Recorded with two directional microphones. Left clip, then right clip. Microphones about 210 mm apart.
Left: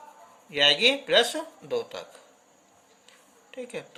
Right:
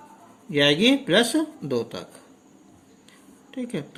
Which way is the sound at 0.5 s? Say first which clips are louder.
Right 1 dB; 10° right (ahead or behind).